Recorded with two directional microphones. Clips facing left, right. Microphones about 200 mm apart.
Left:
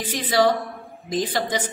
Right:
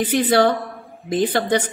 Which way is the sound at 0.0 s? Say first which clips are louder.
Right 4 dB; 60° right (ahead or behind).